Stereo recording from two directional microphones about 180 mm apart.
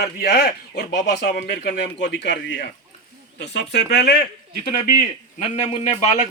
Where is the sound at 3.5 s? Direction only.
70° left (ahead or behind).